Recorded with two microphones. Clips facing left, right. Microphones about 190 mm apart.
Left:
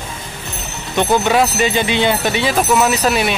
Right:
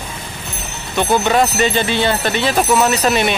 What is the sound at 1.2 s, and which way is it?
Speech, 5° left (ahead or behind).